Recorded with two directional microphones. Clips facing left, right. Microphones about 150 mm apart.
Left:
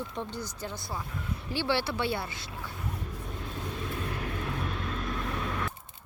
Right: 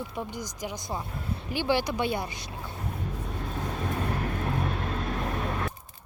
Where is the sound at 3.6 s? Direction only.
55° right (ahead or behind).